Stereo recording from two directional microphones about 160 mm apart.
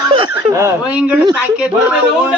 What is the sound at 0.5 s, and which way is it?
Speech, 20° right (ahead or behind).